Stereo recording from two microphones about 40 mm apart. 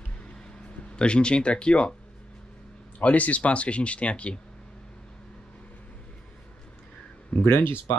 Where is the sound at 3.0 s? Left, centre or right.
Left.